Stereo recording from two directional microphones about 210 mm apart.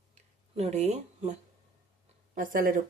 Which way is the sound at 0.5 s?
30° right (ahead or behind).